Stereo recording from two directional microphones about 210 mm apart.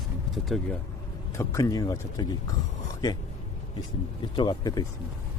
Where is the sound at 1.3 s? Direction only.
15° left (ahead or behind).